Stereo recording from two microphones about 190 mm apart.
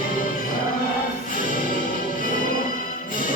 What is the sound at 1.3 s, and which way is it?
Music, 45° left (ahead or behind).